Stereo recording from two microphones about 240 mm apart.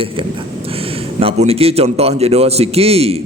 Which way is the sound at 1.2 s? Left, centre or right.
Right.